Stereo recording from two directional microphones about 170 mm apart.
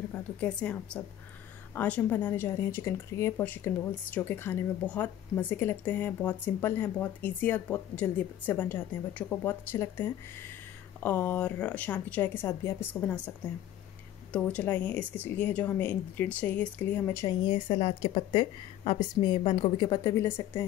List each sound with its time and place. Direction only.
0.1 s speech: 10° left (ahead or behind)
14.3 s speech: 10° left (ahead or behind)
17.5 s a woman's voice: 35° left (ahead or behind); by 20.6 s 15° left (ahead or behind)